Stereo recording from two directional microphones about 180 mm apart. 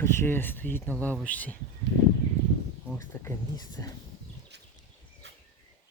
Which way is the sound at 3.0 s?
15° left (ahead or behind).